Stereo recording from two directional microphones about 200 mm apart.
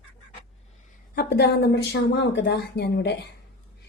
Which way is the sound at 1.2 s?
55° left (ahead or behind).